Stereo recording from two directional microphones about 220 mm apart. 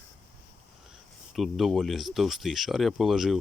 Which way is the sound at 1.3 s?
Centre (ahead or behind).